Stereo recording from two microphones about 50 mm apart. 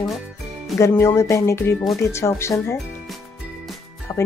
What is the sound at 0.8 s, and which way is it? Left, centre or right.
Speech, left.